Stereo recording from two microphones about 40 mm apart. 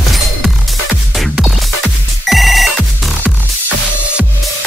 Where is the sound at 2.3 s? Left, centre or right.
Centre.